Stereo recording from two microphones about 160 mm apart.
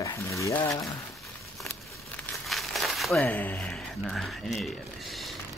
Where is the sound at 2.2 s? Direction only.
Centre (ahead or behind).